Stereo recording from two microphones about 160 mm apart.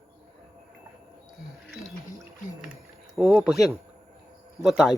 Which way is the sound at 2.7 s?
5° right (ahead or behind).